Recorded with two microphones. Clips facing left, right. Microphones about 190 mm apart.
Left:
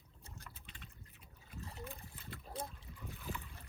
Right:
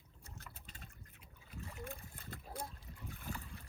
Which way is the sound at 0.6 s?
40° right (ahead or behind).